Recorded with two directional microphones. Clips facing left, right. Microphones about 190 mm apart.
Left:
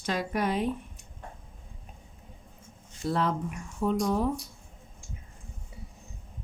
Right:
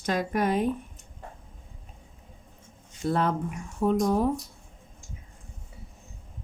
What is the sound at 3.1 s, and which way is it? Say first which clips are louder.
A woman's voice: right 2 dB; 50° right (ahead or behind).